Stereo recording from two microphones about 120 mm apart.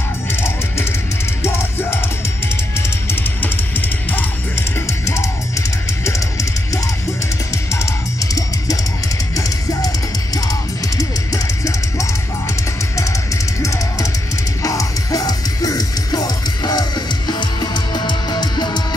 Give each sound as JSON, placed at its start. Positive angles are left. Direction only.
{"t": 0.3, "sound": "music", "side_deg": 20}
{"t": 3.1, "sound": "music", "side_deg": 15}
{"t": 7.5, "sound": "music", "side_deg": 25}
{"t": 13.6, "sound": "music", "side_deg": 25}